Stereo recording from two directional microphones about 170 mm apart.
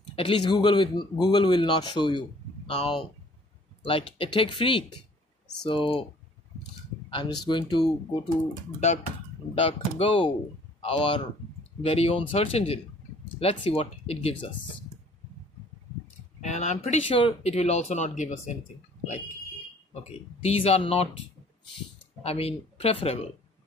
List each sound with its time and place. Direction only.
0.1 s speech: 30° left (ahead or behind)
7.1 s speech: 25° left (ahead or behind)
9.6 s speech: 35° left (ahead or behind)
16.3 s speech: 45° left (ahead or behind)
19.9 s speech: 40° left (ahead or behind)
22.2 s speech: 35° left (ahead or behind)